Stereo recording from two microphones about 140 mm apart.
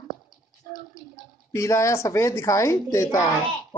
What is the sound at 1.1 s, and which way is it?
Speech, 20° left (ahead or behind).